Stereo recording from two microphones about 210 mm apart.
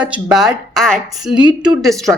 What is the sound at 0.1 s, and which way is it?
Speech, 5° right (ahead or behind).